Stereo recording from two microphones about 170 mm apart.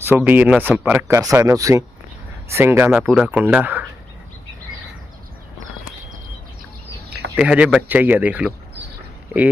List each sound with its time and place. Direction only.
0.2 s speech: 10° right (ahead or behind)
7.3 s speech: 5° right (ahead or behind)